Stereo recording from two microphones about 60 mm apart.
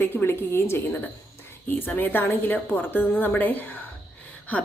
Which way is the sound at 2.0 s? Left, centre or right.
Left.